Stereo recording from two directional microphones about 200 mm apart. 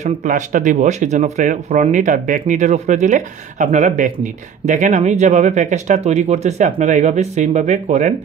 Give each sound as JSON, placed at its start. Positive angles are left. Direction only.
{"t": 0.0, "sound": "speech", "side_deg": -40}